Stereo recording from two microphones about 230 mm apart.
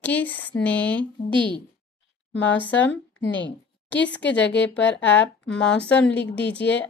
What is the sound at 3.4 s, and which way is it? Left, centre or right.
A woman's voice, left.